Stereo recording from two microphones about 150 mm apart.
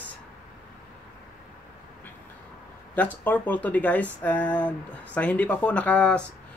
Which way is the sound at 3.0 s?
10° left (ahead or behind).